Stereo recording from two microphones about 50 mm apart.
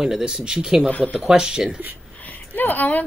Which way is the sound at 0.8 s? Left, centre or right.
Left.